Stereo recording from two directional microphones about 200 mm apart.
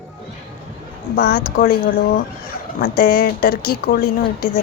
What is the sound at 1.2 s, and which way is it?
Speech, 50° left (ahead or behind).